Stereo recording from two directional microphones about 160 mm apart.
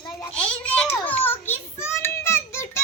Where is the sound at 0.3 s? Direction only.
5° left (ahead or behind).